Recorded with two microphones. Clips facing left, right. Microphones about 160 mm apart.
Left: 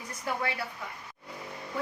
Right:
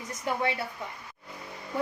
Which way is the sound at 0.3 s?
25° right (ahead or behind).